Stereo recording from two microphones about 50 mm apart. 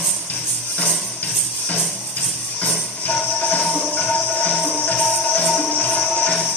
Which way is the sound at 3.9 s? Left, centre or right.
Left.